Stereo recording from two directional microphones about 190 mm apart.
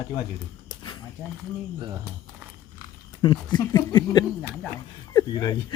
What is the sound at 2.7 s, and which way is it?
Speech, 20° left (ahead or behind).